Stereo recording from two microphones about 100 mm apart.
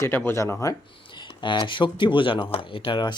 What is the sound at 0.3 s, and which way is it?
Speech, 30° left (ahead or behind).